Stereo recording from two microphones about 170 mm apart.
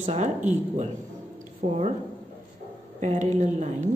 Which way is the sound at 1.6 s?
35° right (ahead or behind).